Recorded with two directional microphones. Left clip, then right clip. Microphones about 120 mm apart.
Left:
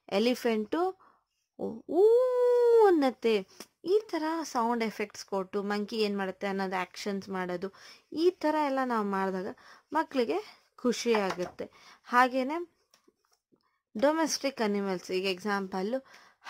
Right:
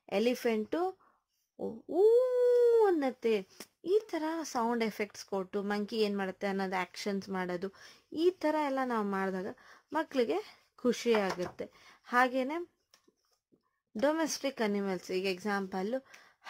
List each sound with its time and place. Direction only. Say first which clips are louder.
0.0 s speech: left 3 dB; 30° left (ahead or behind)
1.6 s speech: left 3 dB; 45° left (ahead or behind)
3.5 s speech: left 2 dB; 20° left (ahead or behind)
13.9 s speech: left 4 dB; 25° left (ahead or behind)